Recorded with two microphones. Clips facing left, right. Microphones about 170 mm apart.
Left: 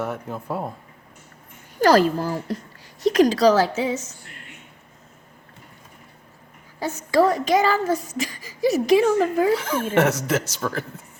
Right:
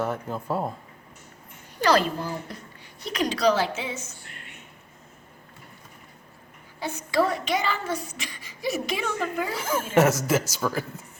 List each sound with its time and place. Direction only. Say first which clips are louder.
0.0 s speech: even; 5° left (ahead or behind)
1.8 s speech: left 6 dB; 45° left (ahead or behind)
6.7 s speech: left 5 dB; 40° left (ahead or behind)
9.6 s speech: left 1 dB; 5° right (ahead or behind)